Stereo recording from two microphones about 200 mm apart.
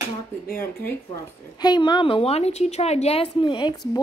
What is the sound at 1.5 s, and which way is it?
A woman's voice, 20° left (ahead or behind).